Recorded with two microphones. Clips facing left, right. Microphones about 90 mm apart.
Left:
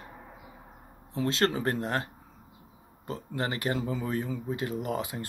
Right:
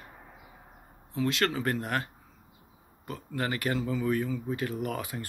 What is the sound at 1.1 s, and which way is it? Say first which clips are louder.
Speech: left 1 dB; 30° left (ahead or behind).